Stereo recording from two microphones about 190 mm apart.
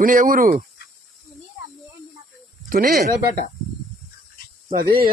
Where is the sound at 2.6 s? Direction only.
45° right (ahead or behind).